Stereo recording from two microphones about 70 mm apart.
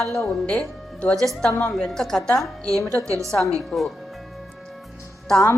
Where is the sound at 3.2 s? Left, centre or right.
Centre.